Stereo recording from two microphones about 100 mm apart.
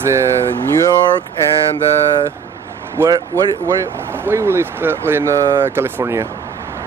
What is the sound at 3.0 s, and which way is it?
Speech, 20° right (ahead or behind).